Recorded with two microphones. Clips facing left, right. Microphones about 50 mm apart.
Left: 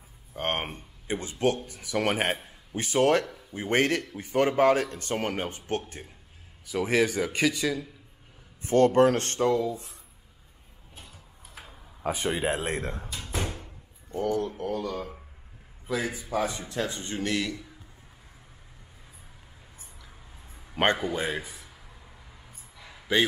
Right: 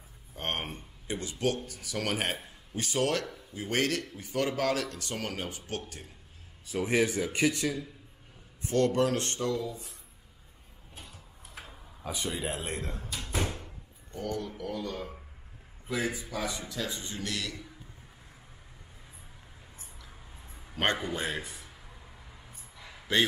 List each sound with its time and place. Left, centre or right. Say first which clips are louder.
0.3 s speech: left 5 dB; left
6.9 s speech: left 3 dB; left
8.6 s speech: left 6 dB; left
11.0 s tick-tock: even; centre
12.0 s a man's voice: left 7 dB; left
13.1 s door: even; centre
14.1 s speech: left 7 dB; centre
14.6 s speech: left 5 dB; left
15.0 s speech: left 3 dB; centre
16.3 s speech: left 6 dB; left
19.8 s a sound: even; centre
20.7 s a man's voice: left 5 dB; centre
21.0 s a sound: left 4 dB; centre